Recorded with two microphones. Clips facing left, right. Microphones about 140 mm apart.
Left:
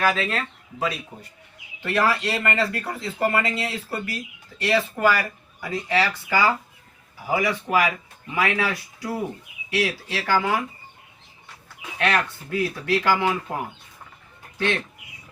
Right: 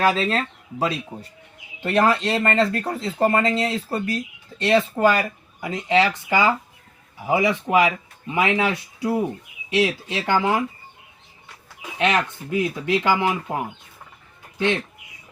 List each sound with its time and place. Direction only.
0.0 s speech: 30° right (ahead or behind)
11.9 s speech: 20° right (ahead or behind)